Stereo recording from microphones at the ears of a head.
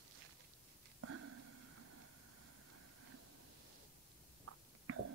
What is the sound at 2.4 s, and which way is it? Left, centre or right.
Vehicle, right.